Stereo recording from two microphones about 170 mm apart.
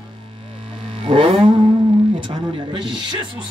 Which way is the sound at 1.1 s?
30° right (ahead or behind).